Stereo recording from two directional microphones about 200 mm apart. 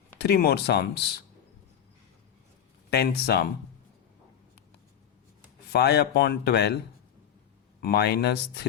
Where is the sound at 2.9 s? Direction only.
55° left (ahead or behind).